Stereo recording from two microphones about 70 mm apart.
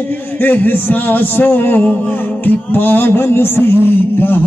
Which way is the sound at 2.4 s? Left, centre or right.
Left.